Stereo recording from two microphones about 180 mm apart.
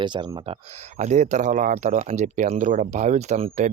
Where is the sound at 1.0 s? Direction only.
40° right (ahead or behind).